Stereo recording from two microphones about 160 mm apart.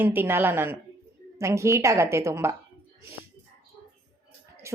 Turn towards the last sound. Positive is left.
turn(degrees=-15)  # may be behind; listen again after turning